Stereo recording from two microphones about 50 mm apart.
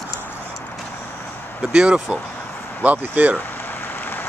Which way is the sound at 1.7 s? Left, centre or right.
Centre.